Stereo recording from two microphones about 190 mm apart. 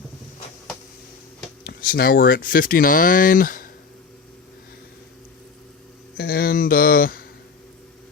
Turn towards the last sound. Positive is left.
turn(degrees=50)  # may be behind; listen again after turning